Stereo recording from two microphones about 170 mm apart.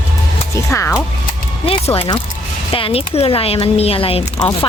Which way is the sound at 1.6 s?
35° left (ahead or behind).